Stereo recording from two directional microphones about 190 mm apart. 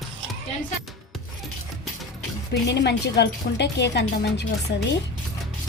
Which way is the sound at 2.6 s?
65° left (ahead or behind).